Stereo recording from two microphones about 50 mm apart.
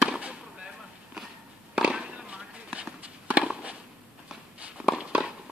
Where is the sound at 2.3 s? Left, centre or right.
Right.